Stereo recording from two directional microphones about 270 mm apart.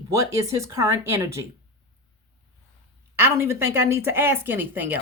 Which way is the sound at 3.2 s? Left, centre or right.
Centre.